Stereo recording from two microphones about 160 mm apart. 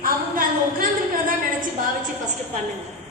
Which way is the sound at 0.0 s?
60° right (ahead or behind).